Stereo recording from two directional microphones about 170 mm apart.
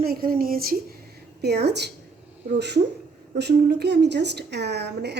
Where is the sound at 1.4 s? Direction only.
75° right (ahead or behind).